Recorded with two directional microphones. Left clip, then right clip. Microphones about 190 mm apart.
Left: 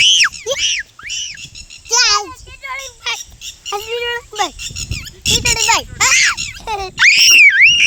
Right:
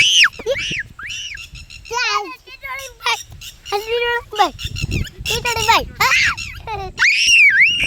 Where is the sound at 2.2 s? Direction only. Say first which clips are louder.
Left 1 dB; 25° right (ahead or behind).